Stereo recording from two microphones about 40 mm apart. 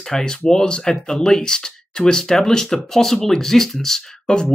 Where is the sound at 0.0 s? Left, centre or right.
Centre.